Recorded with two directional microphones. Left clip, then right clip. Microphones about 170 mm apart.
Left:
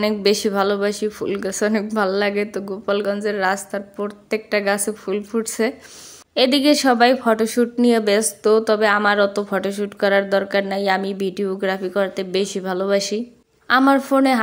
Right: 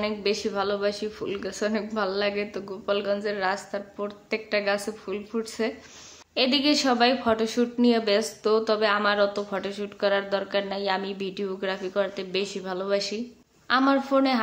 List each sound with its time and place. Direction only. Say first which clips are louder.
0.0 s a woman's voice: left 8 dB; 50° left (ahead or behind)